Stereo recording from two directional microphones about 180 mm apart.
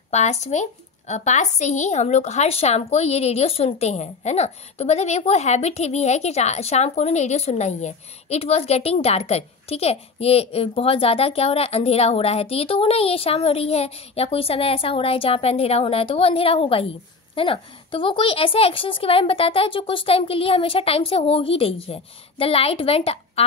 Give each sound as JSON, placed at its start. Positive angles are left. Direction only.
{"t": 0.1, "sound": "speech", "side_deg": 40}